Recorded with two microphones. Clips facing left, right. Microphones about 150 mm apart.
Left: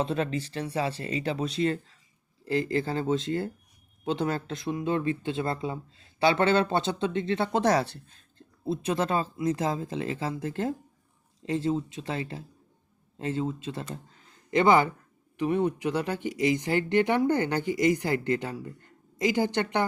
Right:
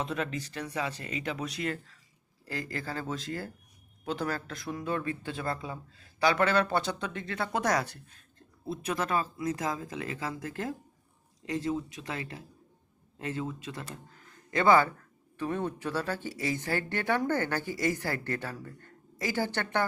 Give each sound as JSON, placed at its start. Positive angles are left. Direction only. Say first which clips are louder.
{"t": 0.0, "sound": "speech", "louder": "left 5 dB", "side_deg": 30}